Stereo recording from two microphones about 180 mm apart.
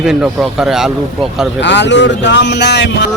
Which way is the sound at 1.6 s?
75° left (ahead or behind).